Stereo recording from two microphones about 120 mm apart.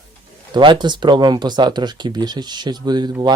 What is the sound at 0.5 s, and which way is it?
Speech, 40° right (ahead or behind).